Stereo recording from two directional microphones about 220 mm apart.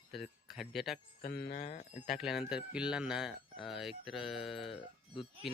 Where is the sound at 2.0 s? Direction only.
Centre (ahead or behind).